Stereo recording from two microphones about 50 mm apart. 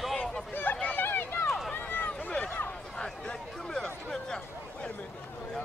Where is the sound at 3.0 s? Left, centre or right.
Centre.